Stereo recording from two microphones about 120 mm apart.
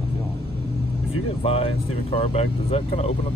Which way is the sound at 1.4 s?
60° left (ahead or behind).